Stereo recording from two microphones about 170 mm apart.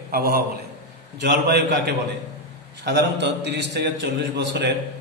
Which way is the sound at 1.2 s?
75° right (ahead or behind).